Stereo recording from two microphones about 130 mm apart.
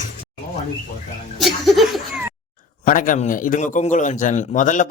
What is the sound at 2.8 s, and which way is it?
A man's voice, 90° left.